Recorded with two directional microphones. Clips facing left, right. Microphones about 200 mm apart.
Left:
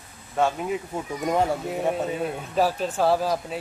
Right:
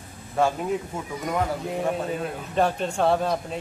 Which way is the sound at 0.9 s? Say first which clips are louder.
Left 3 dB; 30° left (ahead or behind).